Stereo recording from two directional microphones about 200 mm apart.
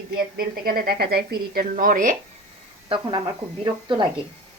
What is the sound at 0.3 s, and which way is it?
A woman's voice, 45° right (ahead or behind).